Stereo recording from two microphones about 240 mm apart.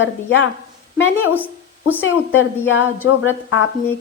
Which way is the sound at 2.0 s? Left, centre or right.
Left.